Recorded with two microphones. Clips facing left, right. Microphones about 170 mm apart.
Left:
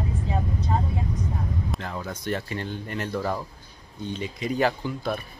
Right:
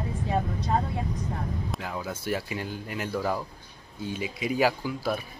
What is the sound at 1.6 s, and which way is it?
Speech, 5° right (ahead or behind).